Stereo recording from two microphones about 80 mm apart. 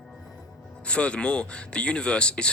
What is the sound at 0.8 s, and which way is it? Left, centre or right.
Speech, centre.